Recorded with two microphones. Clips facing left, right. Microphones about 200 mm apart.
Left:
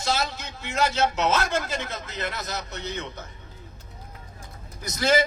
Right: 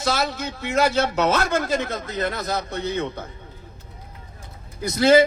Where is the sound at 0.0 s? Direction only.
60° right (ahead or behind).